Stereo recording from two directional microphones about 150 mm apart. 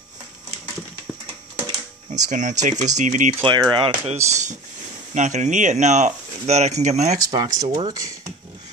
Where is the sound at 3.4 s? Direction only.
30° right (ahead or behind).